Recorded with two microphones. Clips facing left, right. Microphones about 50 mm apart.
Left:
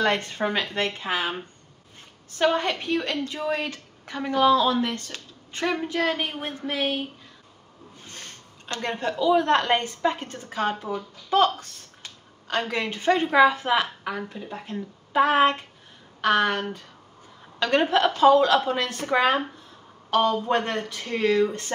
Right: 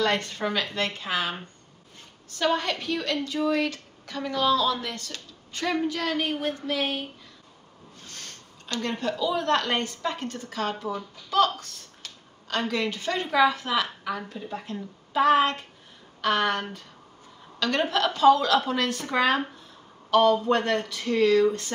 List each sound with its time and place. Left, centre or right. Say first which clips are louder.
0.0 s a woman's voice: left 2 dB; left
2.3 s a woman's voice: left 3 dB; left
8.1 s a woman's voice: left 1 dB; left